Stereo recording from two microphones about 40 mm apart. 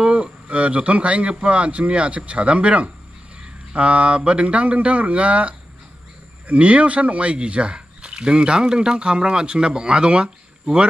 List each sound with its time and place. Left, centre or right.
0.0 s a man's voice: right